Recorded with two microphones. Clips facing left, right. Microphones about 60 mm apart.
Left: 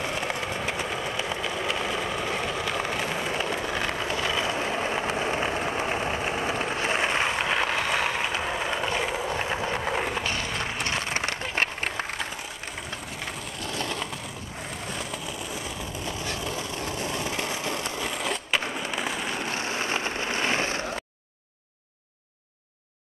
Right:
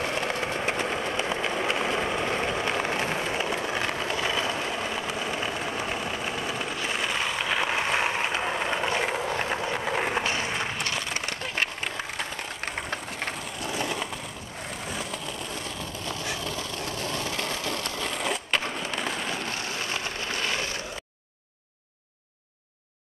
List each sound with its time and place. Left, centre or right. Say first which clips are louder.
0.0 s vehicle: right 1 dB; centre
1.4 s vehicle: right 2 dB; centre
3.2 s skateboard: even; centre
4.5 s vehicle: left 2 dB; centre
7.6 s vehicle: even; centre
10.0 s skateboard: right 2 dB; right
11.0 s a sound: left 2 dB; left
12.6 s train: right 6 dB; right
13.6 s a sound: right 1 dB; centre
14.9 s vehicle: right 1 dB; centre
19.5 s vehicle: left 3 dB; left